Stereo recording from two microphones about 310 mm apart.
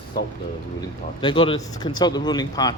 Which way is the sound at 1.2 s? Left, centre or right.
Centre.